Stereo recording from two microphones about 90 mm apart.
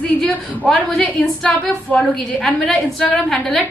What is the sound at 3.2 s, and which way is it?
Speech, 5° left (ahead or behind).